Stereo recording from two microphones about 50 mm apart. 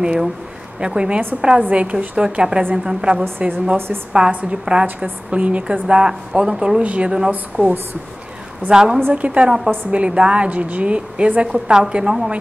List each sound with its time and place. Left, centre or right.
0.0 s a woman's voice: centre
3.3 s speech: right
3.7 s a woman's voice: right
4.3 s a woman's voice: right
6.8 s a woman's voice: right
7.2 s speech: right
8.6 s a woman's voice: centre
9.1 s a woman's voice: right